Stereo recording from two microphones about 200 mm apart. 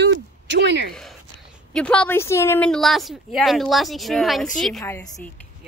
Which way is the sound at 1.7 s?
5° left (ahead or behind).